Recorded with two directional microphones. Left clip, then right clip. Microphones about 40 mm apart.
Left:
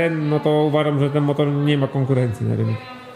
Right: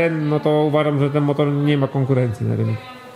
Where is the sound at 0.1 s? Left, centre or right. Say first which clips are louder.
Right 1 dB; centre.